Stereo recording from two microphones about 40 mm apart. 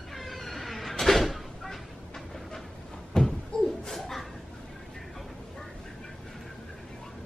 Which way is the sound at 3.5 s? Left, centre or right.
Centre.